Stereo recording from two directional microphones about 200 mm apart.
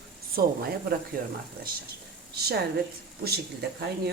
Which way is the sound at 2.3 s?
50° right (ahead or behind).